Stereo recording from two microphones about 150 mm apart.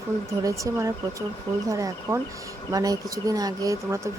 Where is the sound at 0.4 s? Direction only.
20° right (ahead or behind).